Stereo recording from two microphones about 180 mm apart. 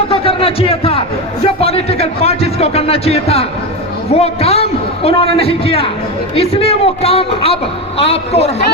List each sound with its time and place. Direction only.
0.1 s a man's voice: 30° left (ahead or behind)